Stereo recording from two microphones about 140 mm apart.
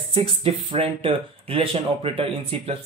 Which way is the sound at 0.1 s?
45° right (ahead or behind).